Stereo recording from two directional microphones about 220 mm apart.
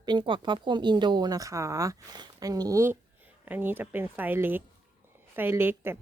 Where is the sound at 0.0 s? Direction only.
20° right (ahead or behind).